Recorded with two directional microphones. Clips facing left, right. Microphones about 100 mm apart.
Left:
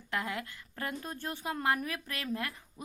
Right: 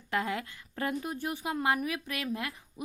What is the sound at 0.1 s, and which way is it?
A woman's voice, 20° right (ahead or behind).